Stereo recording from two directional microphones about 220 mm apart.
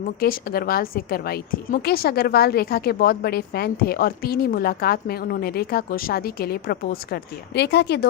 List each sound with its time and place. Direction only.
0.2 s a woman's voice: 40° left (ahead or behind)